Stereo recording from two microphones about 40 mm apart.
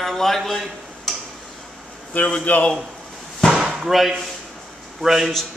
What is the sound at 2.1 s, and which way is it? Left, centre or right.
Speech, left.